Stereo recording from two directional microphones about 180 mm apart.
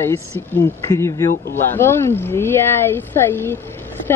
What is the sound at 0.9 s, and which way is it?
Speech, 15° left (ahead or behind).